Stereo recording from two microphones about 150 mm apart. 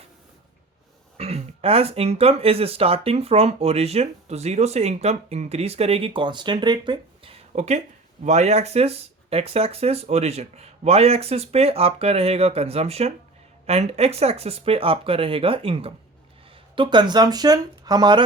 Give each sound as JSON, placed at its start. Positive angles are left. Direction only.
{"t": 1.2, "sound": "speech", "side_deg": -45}